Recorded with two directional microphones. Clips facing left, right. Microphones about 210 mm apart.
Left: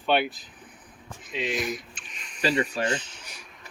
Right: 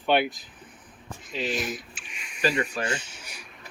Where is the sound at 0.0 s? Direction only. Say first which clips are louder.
Right 1 dB; 15° right (ahead or behind).